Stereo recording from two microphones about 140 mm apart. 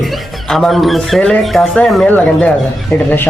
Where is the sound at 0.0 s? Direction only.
Centre (ahead or behind).